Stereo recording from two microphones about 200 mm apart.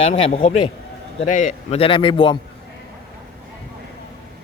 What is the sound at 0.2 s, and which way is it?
Speech, 30° left (ahead or behind).